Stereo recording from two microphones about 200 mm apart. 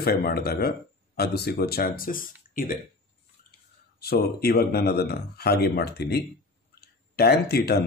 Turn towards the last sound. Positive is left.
turn(degrees=50)  # may be behind; listen again after turning